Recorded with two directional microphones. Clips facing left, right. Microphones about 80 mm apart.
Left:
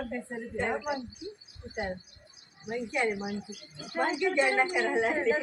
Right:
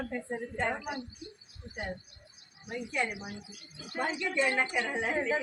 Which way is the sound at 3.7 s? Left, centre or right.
Centre.